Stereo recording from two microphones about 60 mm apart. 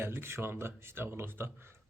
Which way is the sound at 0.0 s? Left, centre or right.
Right.